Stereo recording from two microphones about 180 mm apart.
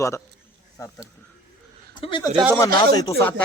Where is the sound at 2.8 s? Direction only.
20° left (ahead or behind).